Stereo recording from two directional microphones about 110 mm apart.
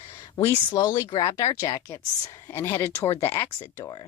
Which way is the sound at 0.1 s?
35° left (ahead or behind).